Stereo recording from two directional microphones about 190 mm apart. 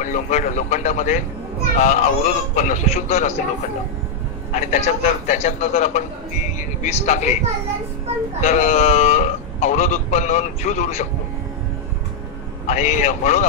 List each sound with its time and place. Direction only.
0.0 s speech: 40° left (ahead or behind)
4.5 s speech: 35° left (ahead or behind)
8.4 s speech: 40° left (ahead or behind)
12.6 s speech: 40° left (ahead or behind)